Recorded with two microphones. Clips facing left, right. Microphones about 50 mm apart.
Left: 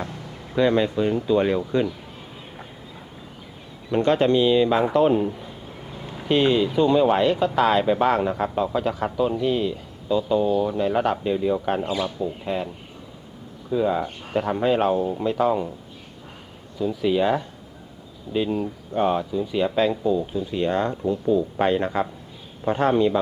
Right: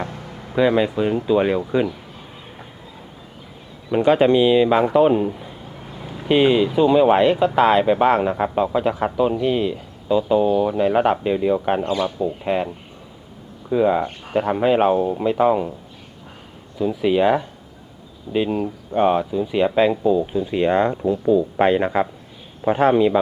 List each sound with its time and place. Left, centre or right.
0.5 s speech: centre
3.9 s a man's voice: centre
11.8 s speech: centre
12.0 s speech: right
16.8 s speech: right
22.8 s speech: centre